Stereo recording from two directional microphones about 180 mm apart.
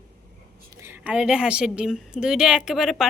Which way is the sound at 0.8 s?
10° right (ahead or behind).